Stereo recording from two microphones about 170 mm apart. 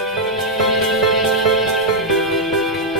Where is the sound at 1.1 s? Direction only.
Centre (ahead or behind).